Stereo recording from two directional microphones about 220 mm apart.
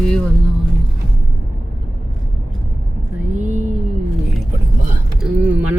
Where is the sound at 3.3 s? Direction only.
35° right (ahead or behind).